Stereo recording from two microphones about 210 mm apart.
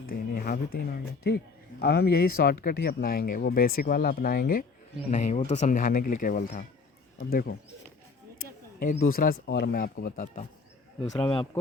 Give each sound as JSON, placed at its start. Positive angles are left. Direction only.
{"t": 0.1, "sound": "a sound", "side_deg": 45}
{"t": 1.8, "sound": "speech", "side_deg": 50}
{"t": 8.8, "sound": "speech", "side_deg": 40}
{"t": 11.1, "sound": "speech", "side_deg": 20}